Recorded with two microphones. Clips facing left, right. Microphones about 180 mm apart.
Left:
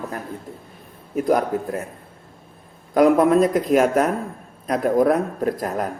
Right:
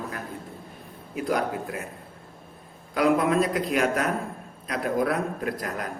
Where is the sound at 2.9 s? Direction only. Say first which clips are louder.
Left 7 dB; 45° left (ahead or behind).